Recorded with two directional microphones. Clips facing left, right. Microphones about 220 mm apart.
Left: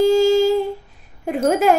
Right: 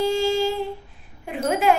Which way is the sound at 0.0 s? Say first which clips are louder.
Left 7 dB; 40° left (ahead or behind).